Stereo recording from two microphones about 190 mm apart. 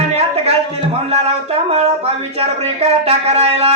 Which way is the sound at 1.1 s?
35° right (ahead or behind).